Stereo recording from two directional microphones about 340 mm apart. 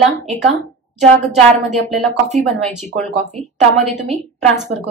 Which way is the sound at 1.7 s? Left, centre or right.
Centre.